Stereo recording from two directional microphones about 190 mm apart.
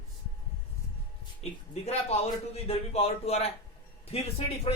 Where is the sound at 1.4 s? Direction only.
35° left (ahead or behind).